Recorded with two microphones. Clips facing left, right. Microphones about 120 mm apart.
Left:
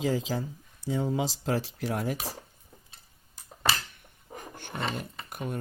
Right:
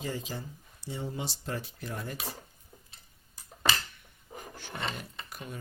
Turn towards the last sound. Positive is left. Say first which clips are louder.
# left 7 dB
turn(degrees=55)  # may be behind; listen again after turning